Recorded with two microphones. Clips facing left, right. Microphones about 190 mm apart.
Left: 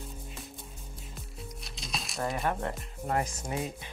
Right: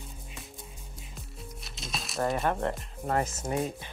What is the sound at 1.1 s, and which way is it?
Music, centre (ahead or behind).